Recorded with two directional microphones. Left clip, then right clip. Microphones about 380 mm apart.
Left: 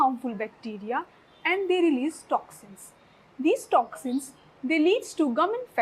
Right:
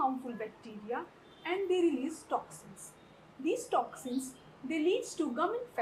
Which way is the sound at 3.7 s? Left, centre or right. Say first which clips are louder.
Left 9 dB; left.